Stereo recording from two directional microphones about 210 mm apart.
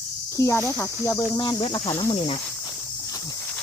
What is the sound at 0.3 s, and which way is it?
Speech, 15° left (ahead or behind).